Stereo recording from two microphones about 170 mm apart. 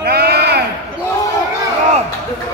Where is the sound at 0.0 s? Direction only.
70° right (ahead or behind).